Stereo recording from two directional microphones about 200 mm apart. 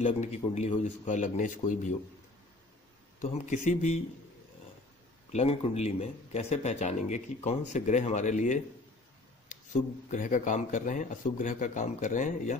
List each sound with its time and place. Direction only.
0.0 s speech: 35° left (ahead or behind)
3.2 s speech: 40° left (ahead or behind)
5.3 s speech: 30° left (ahead or behind)